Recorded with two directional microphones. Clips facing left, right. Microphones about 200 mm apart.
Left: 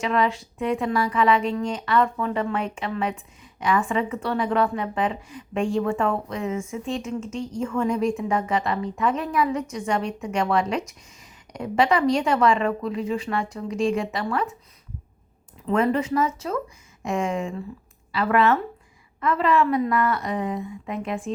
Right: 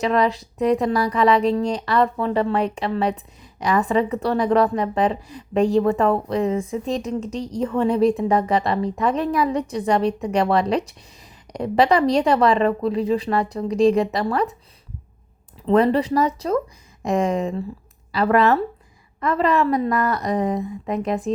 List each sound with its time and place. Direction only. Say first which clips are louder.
0.0 s speech: right 4 dB; 35° right (ahead or behind)
15.6 s speech: right 5 dB; 35° right (ahead or behind)